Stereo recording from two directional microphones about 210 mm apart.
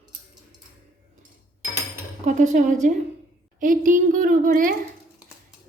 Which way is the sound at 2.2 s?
35° right (ahead or behind).